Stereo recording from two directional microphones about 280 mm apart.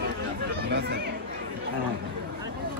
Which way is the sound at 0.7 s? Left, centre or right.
Right.